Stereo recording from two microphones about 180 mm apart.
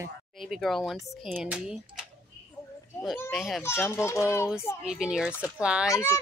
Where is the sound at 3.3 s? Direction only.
Centre (ahead or behind).